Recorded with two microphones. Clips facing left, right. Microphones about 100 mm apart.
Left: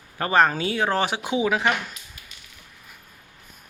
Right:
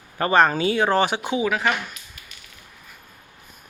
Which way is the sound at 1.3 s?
20° left (ahead or behind).